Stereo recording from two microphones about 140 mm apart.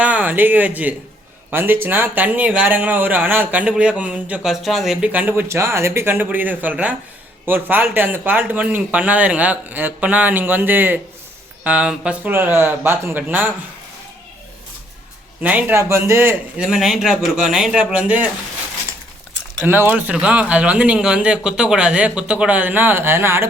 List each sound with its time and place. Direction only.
0.0 s speech: 10° right (ahead or behind)
15.4 s speech: 10° right (ahead or behind)
16.6 s a man's voice: centre (ahead or behind)
19.6 s speech: 15° right (ahead or behind)